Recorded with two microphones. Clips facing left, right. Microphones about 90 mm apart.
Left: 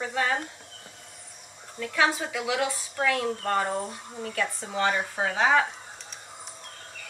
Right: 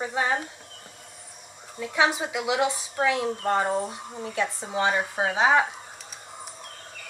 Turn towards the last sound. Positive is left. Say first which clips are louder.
# right 2 dB
turn(degrees=-15)  # may be behind; listen again after turning